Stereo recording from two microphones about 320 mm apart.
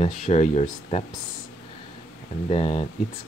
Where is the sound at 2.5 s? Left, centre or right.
Centre.